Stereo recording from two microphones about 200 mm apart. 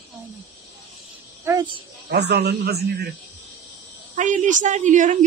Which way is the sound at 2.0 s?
55° right (ahead or behind).